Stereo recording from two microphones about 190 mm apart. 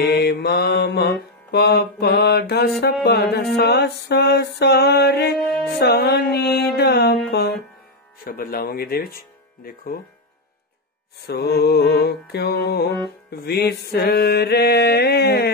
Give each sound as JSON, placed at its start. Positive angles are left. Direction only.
{"t": 0.1, "sound": "mantra", "side_deg": 60}
{"t": 7.2, "sound": "music", "side_deg": 60}
{"t": 8.2, "sound": "speech", "side_deg": 50}
{"t": 11.2, "sound": "mantra", "side_deg": 60}